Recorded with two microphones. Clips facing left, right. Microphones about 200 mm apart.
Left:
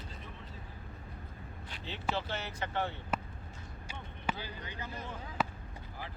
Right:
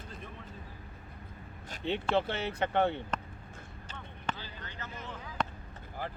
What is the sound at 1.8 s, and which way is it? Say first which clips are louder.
Speech: right 8 dB; 60° right (ahead or behind).